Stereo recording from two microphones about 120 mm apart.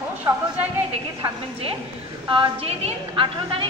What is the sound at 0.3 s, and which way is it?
Speech, 30° right (ahead or behind).